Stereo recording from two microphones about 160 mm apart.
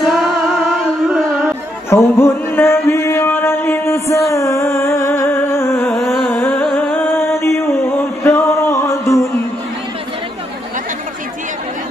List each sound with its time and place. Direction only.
0.0 s music: centre (ahead or behind)
1.9 s chant: 15° left (ahead or behind)
6.2 s music: 10° left (ahead or behind)